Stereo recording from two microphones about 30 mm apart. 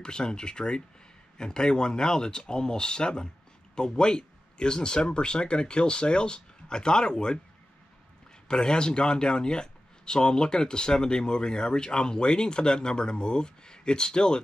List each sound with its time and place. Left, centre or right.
0.0 s speech: left
8.5 s speech: left